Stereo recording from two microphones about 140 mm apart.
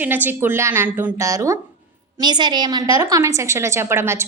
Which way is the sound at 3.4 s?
20° right (ahead or behind).